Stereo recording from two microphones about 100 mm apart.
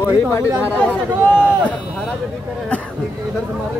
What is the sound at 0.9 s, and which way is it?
Speech, 20° right (ahead or behind).